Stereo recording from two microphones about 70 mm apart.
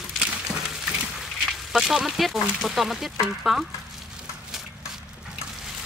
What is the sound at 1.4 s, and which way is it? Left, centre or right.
Speech, centre.